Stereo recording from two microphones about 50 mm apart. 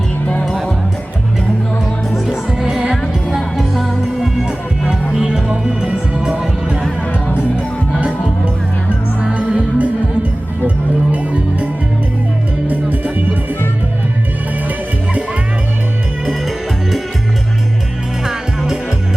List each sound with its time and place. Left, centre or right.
0.4 s music: centre
2.2 s music: centre
3.3 s music: centre
9.3 s music: right
11.1 s music: right
18.3 s music: centre